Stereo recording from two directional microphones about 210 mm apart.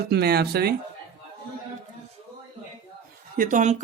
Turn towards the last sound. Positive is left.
turn(degrees=-35)  # may be behind; listen again after turning